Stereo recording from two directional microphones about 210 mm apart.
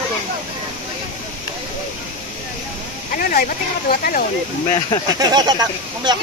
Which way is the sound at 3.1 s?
40° left (ahead or behind).